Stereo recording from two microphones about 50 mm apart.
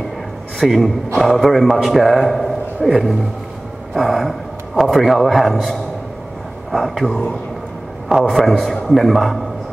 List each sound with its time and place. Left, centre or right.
0.6 s a man's voice: centre
1.7 s a man's voice: centre
2.0 s a man's voice: centre
7.1 s speech: centre
8.3 s a man's voice: centre